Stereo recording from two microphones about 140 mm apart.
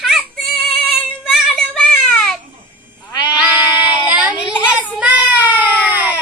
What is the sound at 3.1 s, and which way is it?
Sheep, 30° left (ahead or behind).